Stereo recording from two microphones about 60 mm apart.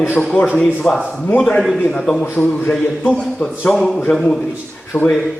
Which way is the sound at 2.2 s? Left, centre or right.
Left.